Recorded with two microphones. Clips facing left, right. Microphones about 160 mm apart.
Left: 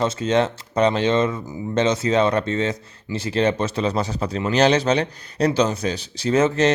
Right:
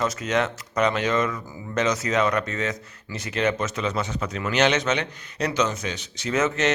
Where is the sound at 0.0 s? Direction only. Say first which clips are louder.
Left 5 dB; 30° left (ahead or behind).